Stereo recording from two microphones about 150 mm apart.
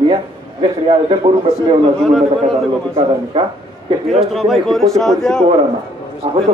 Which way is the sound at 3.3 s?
35° right (ahead or behind).